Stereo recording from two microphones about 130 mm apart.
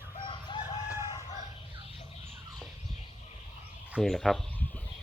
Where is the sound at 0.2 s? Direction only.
40° left (ahead or behind).